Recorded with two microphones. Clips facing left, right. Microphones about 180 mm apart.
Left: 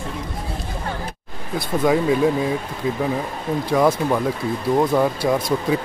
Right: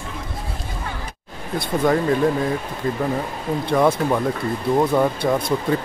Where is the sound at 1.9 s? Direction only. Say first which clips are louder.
Left 1 dB; 5° left (ahead or behind).